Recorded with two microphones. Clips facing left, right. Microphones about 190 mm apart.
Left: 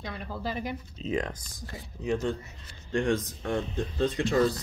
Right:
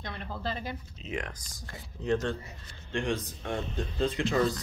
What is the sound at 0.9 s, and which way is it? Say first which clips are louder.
Speech: left 8 dB; 35° left (ahead or behind).